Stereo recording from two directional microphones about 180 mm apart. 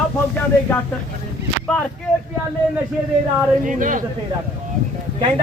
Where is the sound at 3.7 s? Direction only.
45° right (ahead or behind).